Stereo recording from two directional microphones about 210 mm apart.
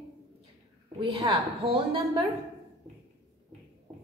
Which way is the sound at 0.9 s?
25° right (ahead or behind).